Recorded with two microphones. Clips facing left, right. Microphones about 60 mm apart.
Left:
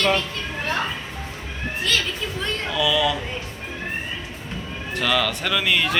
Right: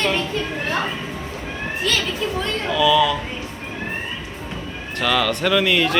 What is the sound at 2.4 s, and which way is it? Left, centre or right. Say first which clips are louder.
Speech: right 4 dB; centre.